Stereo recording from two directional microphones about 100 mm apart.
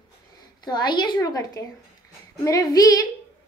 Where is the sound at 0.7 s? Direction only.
45° left (ahead or behind).